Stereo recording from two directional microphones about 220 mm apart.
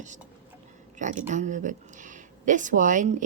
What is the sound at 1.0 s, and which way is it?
A woman's voice, 35° right (ahead or behind).